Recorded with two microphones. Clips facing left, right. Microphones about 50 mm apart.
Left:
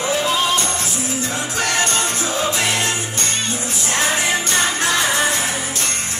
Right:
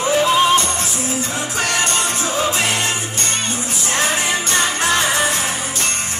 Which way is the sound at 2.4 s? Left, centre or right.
Centre.